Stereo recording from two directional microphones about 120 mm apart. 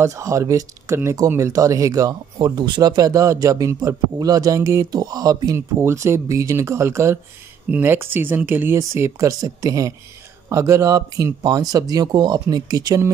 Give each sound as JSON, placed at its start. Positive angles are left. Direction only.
{"t": 0.0, "sound": "speech", "side_deg": -25}